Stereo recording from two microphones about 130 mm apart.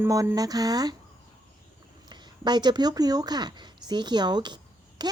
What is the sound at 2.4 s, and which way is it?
A woman's voice, 35° right (ahead or behind).